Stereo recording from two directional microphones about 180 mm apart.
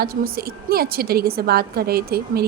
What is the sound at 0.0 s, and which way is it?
A woman's voice, 55° right (ahead or behind).